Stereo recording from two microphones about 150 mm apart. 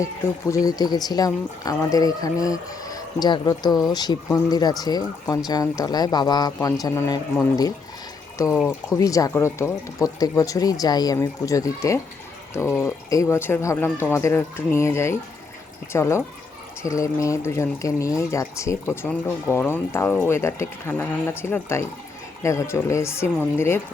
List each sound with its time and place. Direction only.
0.0 s speech: 20° left (ahead or behind)
8.6 s speech: 20° left (ahead or behind)